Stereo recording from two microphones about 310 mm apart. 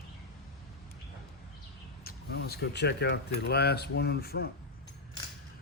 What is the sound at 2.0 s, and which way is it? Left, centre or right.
Speech, left.